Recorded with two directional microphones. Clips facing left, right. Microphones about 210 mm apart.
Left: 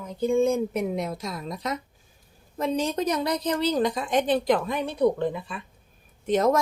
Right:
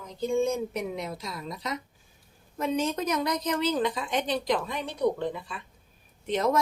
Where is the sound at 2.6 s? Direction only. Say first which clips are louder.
Left 2 dB; 35° left (ahead or behind); by 4.6 s 55° left (ahead or behind).